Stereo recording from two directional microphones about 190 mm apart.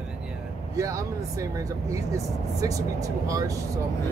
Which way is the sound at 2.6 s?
20° right (ahead or behind).